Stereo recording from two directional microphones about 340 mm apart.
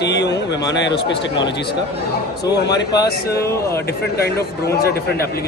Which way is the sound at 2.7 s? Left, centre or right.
Centre.